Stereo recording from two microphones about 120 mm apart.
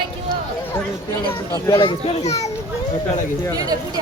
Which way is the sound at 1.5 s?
25° left (ahead or behind).